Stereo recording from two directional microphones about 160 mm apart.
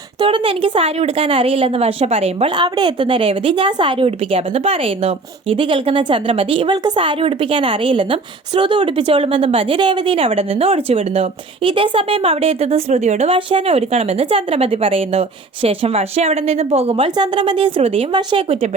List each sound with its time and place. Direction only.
0.2 s a woman's voice: 30° right (ahead or behind)